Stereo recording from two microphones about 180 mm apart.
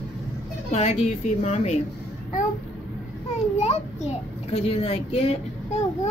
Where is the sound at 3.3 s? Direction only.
35° left (ahead or behind).